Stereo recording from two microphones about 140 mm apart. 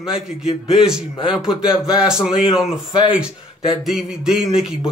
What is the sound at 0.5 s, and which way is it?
Speech, 45° left (ahead or behind).